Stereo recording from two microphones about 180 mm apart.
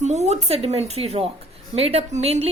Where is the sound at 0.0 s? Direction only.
40° right (ahead or behind).